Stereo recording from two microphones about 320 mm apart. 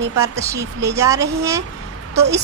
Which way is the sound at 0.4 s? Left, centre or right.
Centre.